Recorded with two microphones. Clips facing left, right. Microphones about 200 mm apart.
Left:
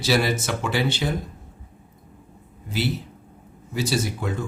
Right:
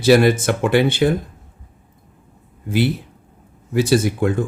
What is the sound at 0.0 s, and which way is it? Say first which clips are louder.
Speech: right 9 dB; 55° right (ahead or behind).